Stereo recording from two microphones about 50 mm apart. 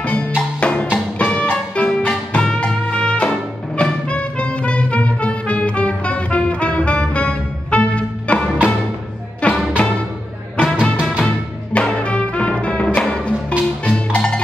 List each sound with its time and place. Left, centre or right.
0.0 s music: left
10.8 s music: centre
11.7 s music: left